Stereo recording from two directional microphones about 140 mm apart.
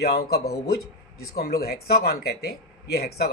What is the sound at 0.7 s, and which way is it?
Speech, 90° left.